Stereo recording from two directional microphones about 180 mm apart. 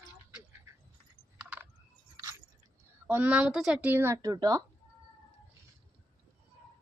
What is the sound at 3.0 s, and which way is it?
Speech, 10° right (ahead or behind).